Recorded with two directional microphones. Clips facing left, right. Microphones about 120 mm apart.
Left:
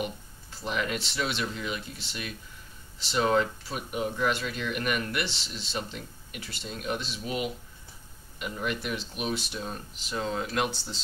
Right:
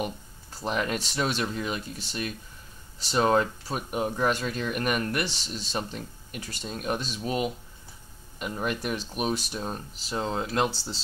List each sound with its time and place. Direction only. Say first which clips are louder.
0.0 s speech: right 2 dB; 40° right (ahead or behind)
8.5 s speech: right 2 dB; 40° right (ahead or behind)